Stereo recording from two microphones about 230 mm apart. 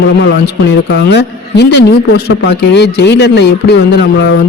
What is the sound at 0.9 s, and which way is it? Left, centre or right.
Speech, left.